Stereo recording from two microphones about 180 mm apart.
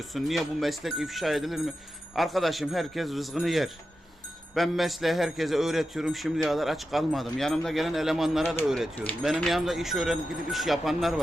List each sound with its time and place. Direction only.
0.1 s a man's voice: centre (ahead or behind)